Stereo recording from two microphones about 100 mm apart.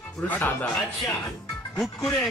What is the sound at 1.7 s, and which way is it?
Speech, 5° left (ahead or behind).